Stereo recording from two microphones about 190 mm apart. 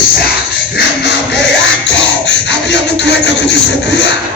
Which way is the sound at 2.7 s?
65° left (ahead or behind).